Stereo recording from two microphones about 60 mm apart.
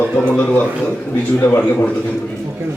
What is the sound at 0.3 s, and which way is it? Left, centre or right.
A man's voice, left.